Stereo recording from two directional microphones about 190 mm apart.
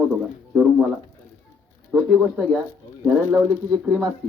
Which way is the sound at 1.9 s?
Centre (ahead or behind).